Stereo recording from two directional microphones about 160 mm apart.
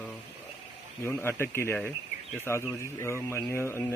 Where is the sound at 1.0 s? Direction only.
15° left (ahead or behind).